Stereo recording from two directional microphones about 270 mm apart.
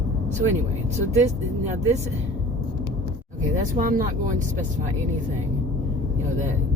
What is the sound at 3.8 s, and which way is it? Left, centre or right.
Speech, right.